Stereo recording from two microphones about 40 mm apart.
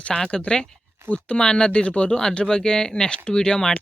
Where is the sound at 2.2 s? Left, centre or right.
Centre.